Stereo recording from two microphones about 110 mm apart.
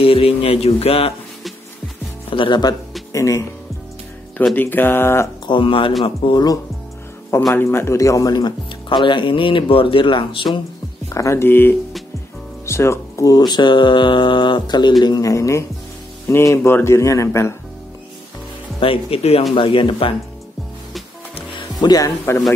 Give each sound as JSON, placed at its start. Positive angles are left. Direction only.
{"t": 0.0, "sound": "speech", "side_deg": 60}
{"t": 2.3, "sound": "speech", "side_deg": 45}
{"t": 3.1, "sound": "speech", "side_deg": 30}
{"t": 4.6, "sound": "speech", "side_deg": 20}
{"t": 5.5, "sound": "speech", "side_deg": 50}
{"t": 7.5, "sound": "speech", "side_deg": 25}
{"t": 11.1, "sound": "speech", "side_deg": 25}
{"t": 18.8, "sound": "speech", "side_deg": 55}
{"t": 21.7, "sound": "speech", "side_deg": 35}